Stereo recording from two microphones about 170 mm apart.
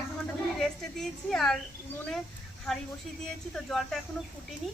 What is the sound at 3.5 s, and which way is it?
Speech, 5° left (ahead or behind).